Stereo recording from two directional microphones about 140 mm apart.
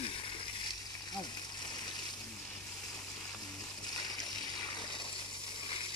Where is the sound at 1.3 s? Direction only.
30° left (ahead or behind).